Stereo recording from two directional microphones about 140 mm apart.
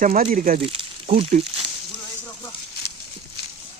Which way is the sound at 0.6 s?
40° right (ahead or behind).